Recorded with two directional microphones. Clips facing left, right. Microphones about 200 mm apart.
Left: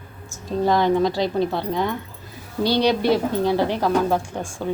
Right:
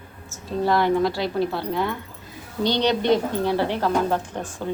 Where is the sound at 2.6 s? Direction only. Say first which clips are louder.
Left 2 dB; 10° left (ahead or behind).